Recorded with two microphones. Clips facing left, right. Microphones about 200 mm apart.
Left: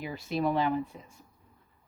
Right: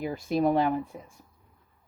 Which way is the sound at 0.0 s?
50° right (ahead or behind).